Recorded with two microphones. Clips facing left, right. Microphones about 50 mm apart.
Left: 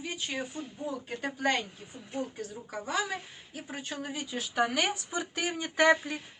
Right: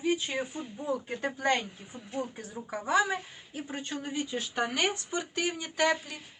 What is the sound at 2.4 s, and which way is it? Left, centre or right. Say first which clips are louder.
Speech: right 1 dB; right.